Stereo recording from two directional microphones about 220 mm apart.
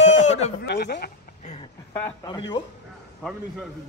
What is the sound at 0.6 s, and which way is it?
Speech, 50° left (ahead or behind).